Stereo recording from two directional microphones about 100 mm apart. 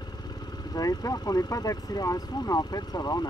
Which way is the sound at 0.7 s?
40° left (ahead or behind).